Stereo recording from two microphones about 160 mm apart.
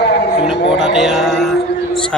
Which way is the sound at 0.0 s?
90° left.